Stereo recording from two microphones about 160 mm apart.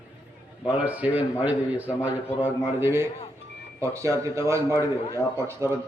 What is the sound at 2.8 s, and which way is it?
Speech, 15° right (ahead or behind).